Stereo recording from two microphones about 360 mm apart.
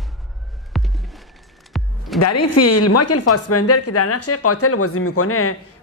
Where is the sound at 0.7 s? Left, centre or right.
Centre.